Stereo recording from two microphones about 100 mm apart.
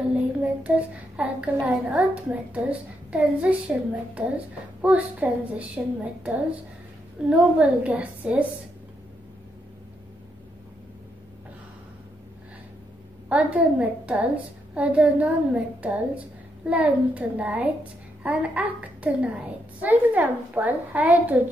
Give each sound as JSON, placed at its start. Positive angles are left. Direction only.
{"t": 0.1, "sound": "a child's voice", "side_deg": -15}
{"t": 13.3, "sound": "a woman's voice", "side_deg": -15}